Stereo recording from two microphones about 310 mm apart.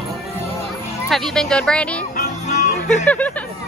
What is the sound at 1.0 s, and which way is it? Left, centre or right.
Speech, centre.